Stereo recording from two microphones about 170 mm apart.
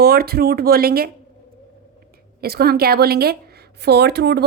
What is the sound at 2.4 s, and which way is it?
Speech, 65° right (ahead or behind).